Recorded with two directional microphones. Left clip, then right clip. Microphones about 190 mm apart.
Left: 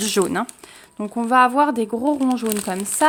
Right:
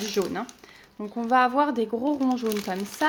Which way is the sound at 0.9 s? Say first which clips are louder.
Left 6 dB; 35° left (ahead or behind).